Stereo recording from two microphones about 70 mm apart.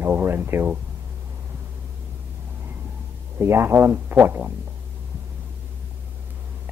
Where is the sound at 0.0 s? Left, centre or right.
Right.